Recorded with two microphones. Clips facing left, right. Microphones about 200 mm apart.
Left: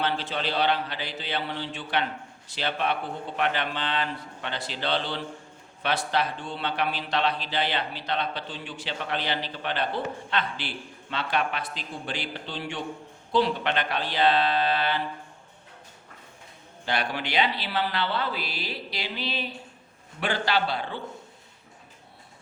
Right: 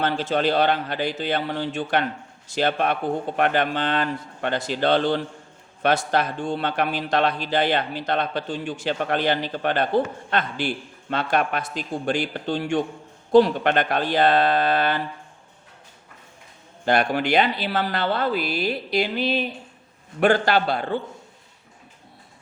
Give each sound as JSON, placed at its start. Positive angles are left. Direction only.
{"t": 0.0, "sound": "speech", "side_deg": -45}
{"t": 16.8, "sound": "speech", "side_deg": -50}